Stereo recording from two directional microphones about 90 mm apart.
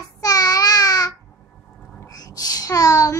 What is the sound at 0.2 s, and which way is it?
Babbling, 45° left (ahead or behind).